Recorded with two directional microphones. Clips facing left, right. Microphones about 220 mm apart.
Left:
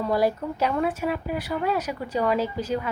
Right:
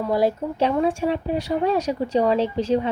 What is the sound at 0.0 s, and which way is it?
A woman's voice, 20° right (ahead or behind).